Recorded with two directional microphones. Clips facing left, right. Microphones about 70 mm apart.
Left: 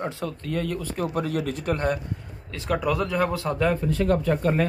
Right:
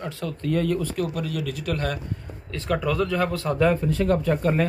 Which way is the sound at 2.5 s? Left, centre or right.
Centre.